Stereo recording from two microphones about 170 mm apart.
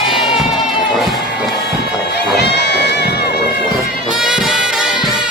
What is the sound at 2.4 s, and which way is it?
Music, 80° left.